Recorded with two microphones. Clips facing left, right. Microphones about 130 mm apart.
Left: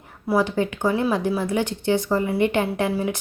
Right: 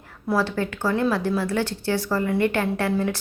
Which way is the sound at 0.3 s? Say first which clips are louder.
Left 3 dB; 15° left (ahead or behind).